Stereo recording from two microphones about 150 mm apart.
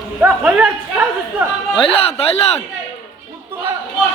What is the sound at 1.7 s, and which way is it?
Speech, 40° left (ahead or behind).